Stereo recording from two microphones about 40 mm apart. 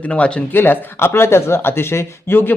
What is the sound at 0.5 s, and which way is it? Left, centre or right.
Speech, left.